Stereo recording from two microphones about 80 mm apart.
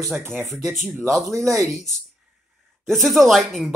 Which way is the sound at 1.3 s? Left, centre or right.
Right.